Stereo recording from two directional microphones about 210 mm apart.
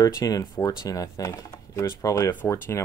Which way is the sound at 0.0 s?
15° left (ahead or behind).